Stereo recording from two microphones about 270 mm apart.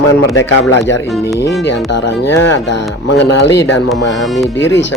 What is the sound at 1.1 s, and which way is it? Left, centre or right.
Speech, centre.